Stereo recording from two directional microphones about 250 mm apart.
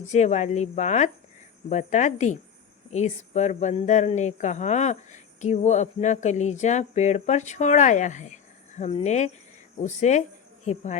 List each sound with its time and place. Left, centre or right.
0.1 s speech: left